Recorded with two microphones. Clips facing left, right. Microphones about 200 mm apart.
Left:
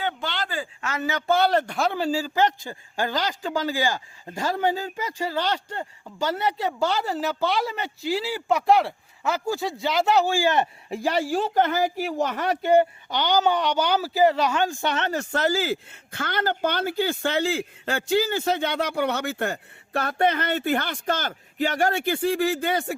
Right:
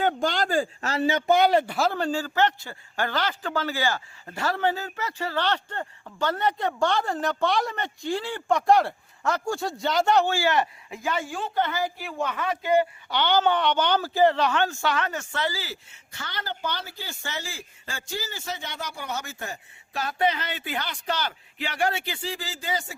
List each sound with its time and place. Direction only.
0.0 s speech: 45° right (ahead or behind)
1.3 s speech: 15° right (ahead or behind); by 10.7 s 20° left (ahead or behind)
10.8 s speech: 35° left (ahead or behind)
13.1 s speech: 15° left (ahead or behind); by 23.0 s 60° left (ahead or behind)